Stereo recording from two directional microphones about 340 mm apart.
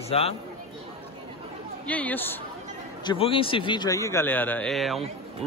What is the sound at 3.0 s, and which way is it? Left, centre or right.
A man's voice, centre.